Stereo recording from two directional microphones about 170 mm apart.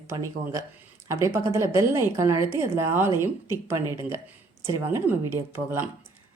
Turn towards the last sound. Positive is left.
turn(degrees=-15)  # may be behind; listen again after turning